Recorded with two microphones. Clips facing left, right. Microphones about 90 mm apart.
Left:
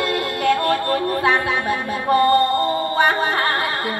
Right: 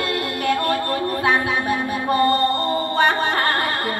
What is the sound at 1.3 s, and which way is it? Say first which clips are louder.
Music: even; 15° right (ahead or behind).